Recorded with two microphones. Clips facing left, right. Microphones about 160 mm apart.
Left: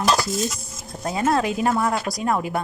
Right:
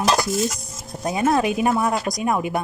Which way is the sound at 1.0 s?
20° right (ahead or behind).